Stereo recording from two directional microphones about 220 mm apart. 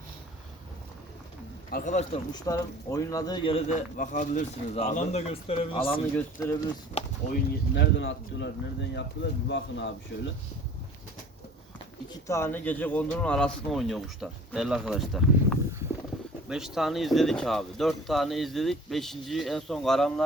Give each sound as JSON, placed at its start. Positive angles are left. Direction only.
{"t": 1.7, "sound": "speech", "side_deg": 35}
{"t": 2.3, "sound": "speech", "side_deg": 15}
{"t": 6.1, "sound": "speech", "side_deg": 10}
{"t": 6.9, "sound": "speech", "side_deg": 40}
{"t": 12.1, "sound": "speech", "side_deg": 10}